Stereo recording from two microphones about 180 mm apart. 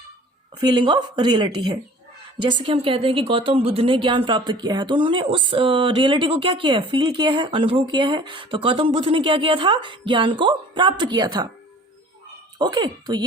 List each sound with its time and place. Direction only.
0.6 s speech: 25° right (ahead or behind)
12.5 s speech: 25° right (ahead or behind)